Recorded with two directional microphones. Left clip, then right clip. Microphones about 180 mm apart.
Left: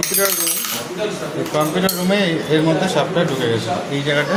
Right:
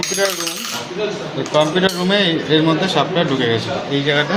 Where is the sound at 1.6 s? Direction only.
15° right (ahead or behind).